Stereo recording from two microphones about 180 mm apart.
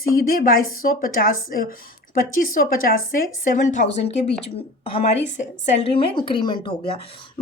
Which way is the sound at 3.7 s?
40° left (ahead or behind).